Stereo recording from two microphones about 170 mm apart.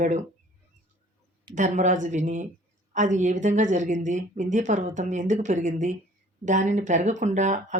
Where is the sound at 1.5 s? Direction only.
45° right (ahead or behind).